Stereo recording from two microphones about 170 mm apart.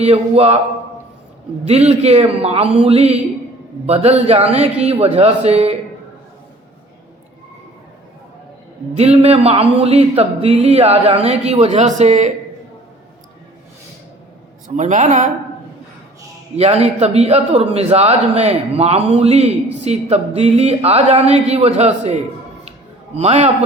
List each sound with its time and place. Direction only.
0.0 s a man's voice: 35° right (ahead or behind)
1.6 s a man's voice: 40° right (ahead or behind)
9.0 s a man's voice: 40° right (ahead or behind)
14.8 s speech: 45° right (ahead or behind)
16.6 s a man's voice: 40° right (ahead or behind)